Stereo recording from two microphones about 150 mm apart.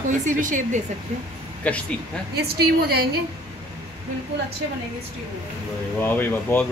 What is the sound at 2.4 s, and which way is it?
Speech, 90° right.